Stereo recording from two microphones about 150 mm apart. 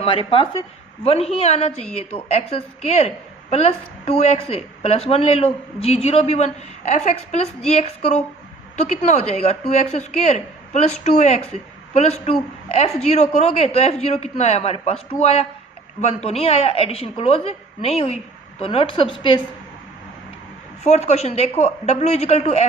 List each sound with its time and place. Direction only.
0.0 s a woman's voice: 40° left (ahead or behind)
20.8 s a woman's voice: 50° left (ahead or behind)